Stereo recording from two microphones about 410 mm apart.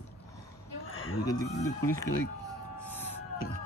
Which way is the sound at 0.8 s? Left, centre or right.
Left.